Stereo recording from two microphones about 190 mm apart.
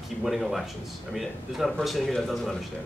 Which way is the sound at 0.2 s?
Centre (ahead or behind).